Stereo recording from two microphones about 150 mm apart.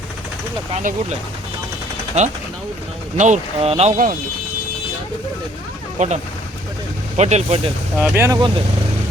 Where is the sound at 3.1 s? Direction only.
50° right (ahead or behind).